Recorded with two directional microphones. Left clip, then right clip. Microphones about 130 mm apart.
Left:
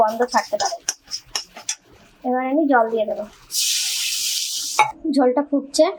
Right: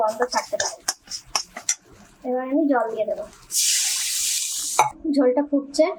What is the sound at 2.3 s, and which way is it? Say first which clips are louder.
Speech: left 2 dB; 20° left (ahead or behind).